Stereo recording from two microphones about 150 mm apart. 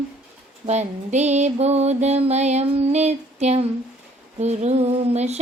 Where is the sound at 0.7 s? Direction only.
50° right (ahead or behind).